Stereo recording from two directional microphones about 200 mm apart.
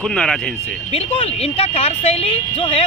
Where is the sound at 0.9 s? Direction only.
30° left (ahead or behind).